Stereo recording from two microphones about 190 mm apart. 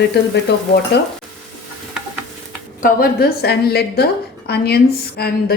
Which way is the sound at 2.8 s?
50° left (ahead or behind).